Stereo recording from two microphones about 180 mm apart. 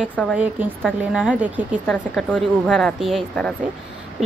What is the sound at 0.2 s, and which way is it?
A woman's voice, centre (ahead or behind).